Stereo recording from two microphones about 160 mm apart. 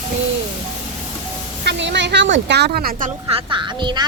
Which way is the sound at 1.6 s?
90° right.